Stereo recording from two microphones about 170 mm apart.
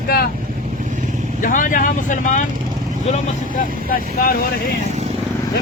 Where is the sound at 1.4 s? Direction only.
50° left (ahead or behind).